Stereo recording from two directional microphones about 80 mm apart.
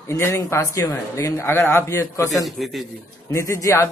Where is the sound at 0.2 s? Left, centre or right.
Left.